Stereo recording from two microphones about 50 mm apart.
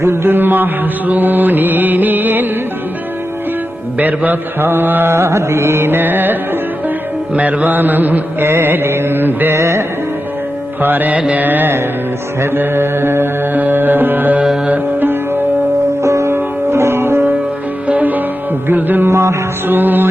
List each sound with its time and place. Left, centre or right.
0.0 s music: right
3.9 s music: right
5.1 s music: right
9.6 s music: right
10.8 s music: right
11.2 s carnatic music: right
11.4 s music: right
12.4 s music: right
16.0 s music: right
16.3 s music: right
17.8 s music: right
19.0 s music: right
19.6 s music: right